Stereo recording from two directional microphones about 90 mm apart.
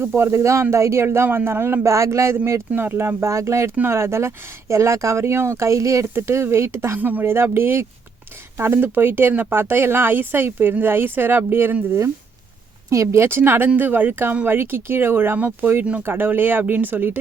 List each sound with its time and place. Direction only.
0.0 s speech: 25° right (ahead or behind)
12.9 s speech: 35° right (ahead or behind)